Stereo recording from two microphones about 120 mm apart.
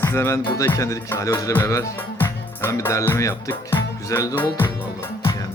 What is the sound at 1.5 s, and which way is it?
Music, 25° left (ahead or behind).